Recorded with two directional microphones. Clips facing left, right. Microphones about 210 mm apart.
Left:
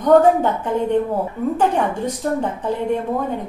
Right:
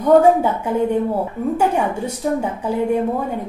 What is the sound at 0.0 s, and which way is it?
A woman's voice, 10° right (ahead or behind).